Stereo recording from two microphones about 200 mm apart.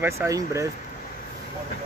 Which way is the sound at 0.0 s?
15° right (ahead or behind).